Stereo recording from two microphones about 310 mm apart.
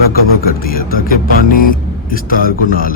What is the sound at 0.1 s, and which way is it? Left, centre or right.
Speech, left.